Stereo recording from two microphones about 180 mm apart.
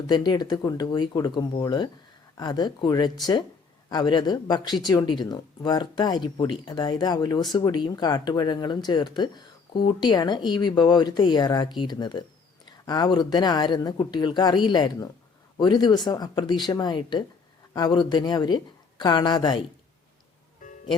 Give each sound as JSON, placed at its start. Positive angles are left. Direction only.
{"t": 0.1, "sound": "speech", "side_deg": 25}